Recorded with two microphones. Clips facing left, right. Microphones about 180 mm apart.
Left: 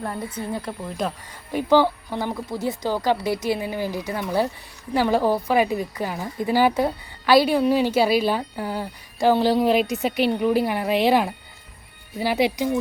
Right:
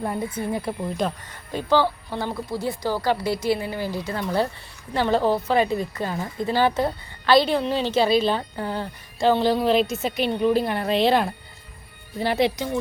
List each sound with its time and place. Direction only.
0.3 s speech: 10° right (ahead or behind)
1.5 s a woman's voice: 15° left (ahead or behind)